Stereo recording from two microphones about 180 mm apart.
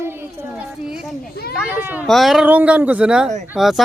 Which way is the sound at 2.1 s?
Centre (ahead or behind).